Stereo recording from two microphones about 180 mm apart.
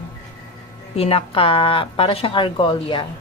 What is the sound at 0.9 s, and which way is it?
Speech, 35° left (ahead or behind).